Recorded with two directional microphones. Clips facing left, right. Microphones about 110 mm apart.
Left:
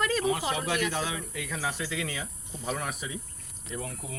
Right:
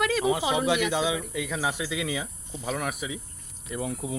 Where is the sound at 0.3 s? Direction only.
15° right (ahead or behind).